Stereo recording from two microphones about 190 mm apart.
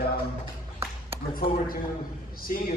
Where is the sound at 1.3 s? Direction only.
50° left (ahead or behind).